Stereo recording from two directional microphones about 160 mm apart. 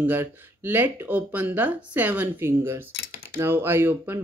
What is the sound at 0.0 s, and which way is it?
Speech, 10° right (ahead or behind).